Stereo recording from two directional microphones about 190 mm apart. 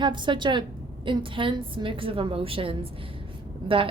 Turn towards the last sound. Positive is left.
turn(degrees=-30)  # may be behind; listen again after turning